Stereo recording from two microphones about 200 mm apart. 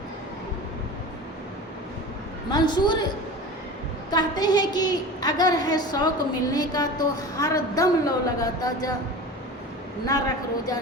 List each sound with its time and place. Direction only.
2.5 s a woman's voice: 20° left (ahead or behind)
4.1 s a woman's voice: 20° left (ahead or behind)
10.1 s a woman's voice: 20° left (ahead or behind)